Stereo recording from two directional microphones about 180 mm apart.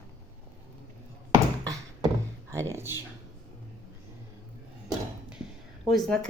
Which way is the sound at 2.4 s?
15° right (ahead or behind).